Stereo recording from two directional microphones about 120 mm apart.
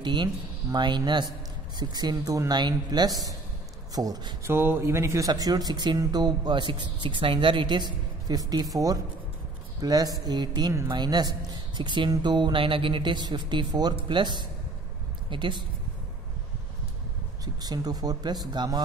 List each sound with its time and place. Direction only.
0.0 s speech: 40° right (ahead or behind)
4.5 s speech: 20° right (ahead or behind)
5.3 s speech: 35° right (ahead or behind)
17.6 s speech: 30° right (ahead or behind)